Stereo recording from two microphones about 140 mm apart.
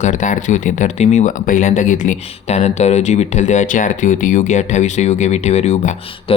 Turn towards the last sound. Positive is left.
turn(degrees=55)  # may be behind; listen again after turning